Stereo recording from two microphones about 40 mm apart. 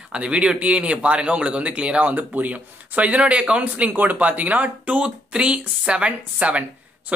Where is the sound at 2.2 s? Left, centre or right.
Right.